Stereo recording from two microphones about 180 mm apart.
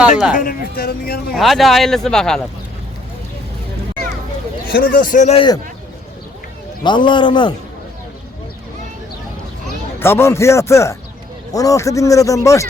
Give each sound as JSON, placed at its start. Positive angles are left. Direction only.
{"t": 0.0, "sound": "speech", "side_deg": -5}
{"t": 0.3, "sound": "speech", "side_deg": 50}
{"t": 1.3, "sound": "speech", "side_deg": 0}
{"t": 4.7, "sound": "speech", "side_deg": 50}
{"t": 6.8, "sound": "a man's voice", "side_deg": 25}
{"t": 10.0, "sound": "speech", "side_deg": 15}